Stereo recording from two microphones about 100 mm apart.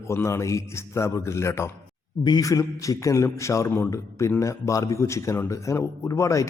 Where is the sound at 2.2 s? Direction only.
40° left (ahead or behind).